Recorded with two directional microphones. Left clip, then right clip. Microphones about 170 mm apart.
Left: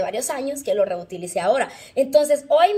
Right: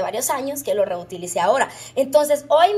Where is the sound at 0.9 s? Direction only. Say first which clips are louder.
Right 1 dB; 40° right (ahead or behind).